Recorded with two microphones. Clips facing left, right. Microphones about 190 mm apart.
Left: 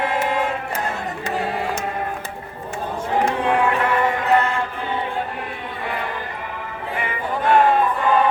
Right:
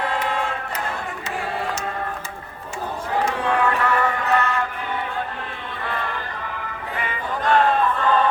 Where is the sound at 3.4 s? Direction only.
20° left (ahead or behind).